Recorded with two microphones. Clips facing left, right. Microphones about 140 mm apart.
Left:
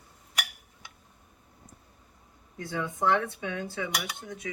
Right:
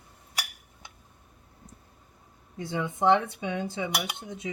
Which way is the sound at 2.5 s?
20° right (ahead or behind).